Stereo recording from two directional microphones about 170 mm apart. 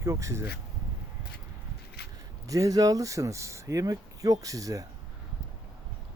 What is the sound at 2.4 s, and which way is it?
Speech, 20° right (ahead or behind).